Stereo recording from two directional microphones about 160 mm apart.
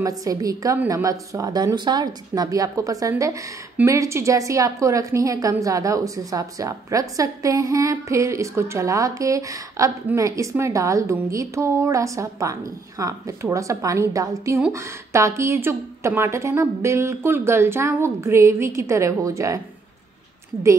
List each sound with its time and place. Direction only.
0.0 s a woman's voice: 20° right (ahead or behind)